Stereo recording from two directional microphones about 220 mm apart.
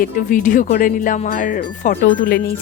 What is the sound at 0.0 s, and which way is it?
Speech, 35° left (ahead or behind).